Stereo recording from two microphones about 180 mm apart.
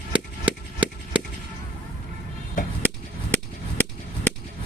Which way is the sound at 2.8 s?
10° left (ahead or behind).